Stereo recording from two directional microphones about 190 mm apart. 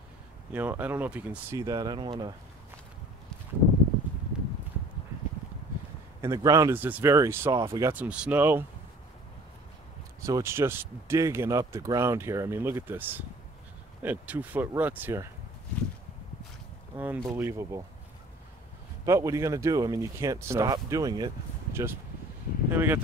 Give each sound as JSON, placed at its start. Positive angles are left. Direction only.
{"t": 0.5, "sound": "speech", "side_deg": -10}
{"t": 1.6, "sound": "speech", "side_deg": -20}
{"t": 4.3, "sound": "clip-clop", "side_deg": -5}
{"t": 6.2, "sound": "speech", "side_deg": -20}
{"t": 10.2, "sound": "speech", "side_deg": -15}
{"t": 16.9, "sound": "speech", "side_deg": -10}
{"t": 19.0, "sound": "speech", "side_deg": -15}
{"t": 22.7, "sound": "speech", "side_deg": -10}